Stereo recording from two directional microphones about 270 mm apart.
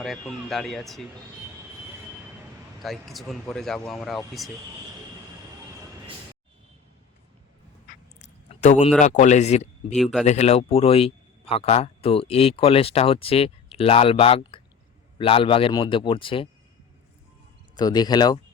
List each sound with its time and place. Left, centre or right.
0.0 s speech: centre
2.8 s speech: centre
8.2 s a sound: left
9.0 s speech: left
9.9 s speech: centre
10.2 s speech: left
17.7 s speech: centre